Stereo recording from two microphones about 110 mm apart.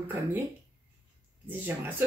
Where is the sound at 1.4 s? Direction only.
20° right (ahead or behind).